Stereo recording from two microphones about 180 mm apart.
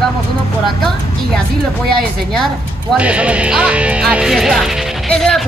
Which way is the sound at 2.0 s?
Centre (ahead or behind).